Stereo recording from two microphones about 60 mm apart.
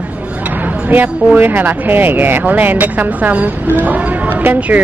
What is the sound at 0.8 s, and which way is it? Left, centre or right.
Speech, right.